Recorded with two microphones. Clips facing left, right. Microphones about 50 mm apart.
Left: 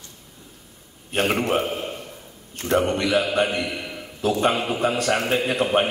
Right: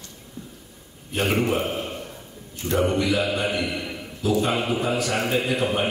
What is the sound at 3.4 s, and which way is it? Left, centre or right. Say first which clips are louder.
Mantra: left 3 dB; left.